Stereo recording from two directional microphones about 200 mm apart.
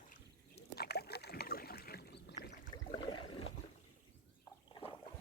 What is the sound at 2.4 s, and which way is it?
Boat, 55° left (ahead or behind).